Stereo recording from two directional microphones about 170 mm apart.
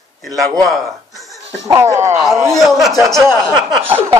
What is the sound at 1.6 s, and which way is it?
Speech, 15° right (ahead or behind).